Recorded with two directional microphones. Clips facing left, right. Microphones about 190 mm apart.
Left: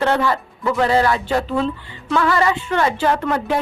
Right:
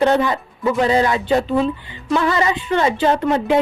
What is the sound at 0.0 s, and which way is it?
A woman's voice, 15° right (ahead or behind).